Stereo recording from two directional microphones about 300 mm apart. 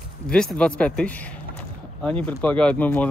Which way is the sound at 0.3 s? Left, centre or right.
Centre.